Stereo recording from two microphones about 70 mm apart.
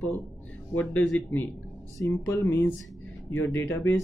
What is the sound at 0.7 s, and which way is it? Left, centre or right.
Speech, left.